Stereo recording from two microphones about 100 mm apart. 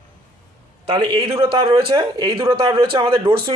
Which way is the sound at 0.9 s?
45° right (ahead or behind).